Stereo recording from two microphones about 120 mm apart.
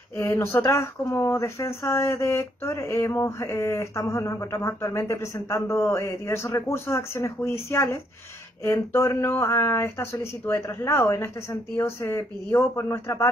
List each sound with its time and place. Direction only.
0.2 s speech: 20° left (ahead or behind)